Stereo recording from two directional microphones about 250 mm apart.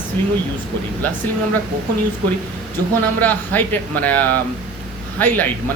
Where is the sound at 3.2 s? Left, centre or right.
Centre.